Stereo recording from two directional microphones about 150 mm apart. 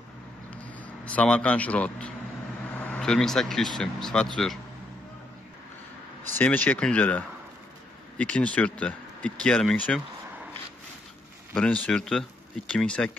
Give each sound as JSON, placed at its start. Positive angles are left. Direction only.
{"t": 0.6, "sound": "speech", "side_deg": 10}
{"t": 6.3, "sound": "speech", "side_deg": 10}
{"t": 11.5, "sound": "speech", "side_deg": 10}